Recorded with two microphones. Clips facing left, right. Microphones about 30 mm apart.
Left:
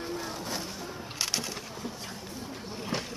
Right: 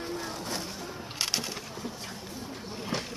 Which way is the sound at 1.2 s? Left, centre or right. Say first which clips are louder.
Right 1 dB; centre.